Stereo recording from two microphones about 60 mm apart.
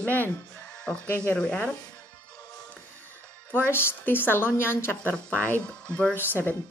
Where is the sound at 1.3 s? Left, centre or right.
Centre.